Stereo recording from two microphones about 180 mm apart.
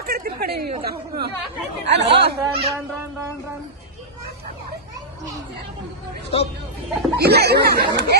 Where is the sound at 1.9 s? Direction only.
70° right (ahead or behind).